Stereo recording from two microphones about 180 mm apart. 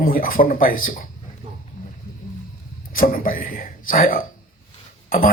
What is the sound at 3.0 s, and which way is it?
Speech, 50° left (ahead or behind).